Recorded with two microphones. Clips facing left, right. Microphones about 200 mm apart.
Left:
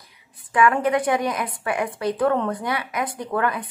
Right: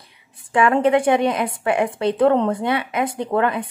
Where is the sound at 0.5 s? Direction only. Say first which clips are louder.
Right 3 dB; 25° right (ahead or behind).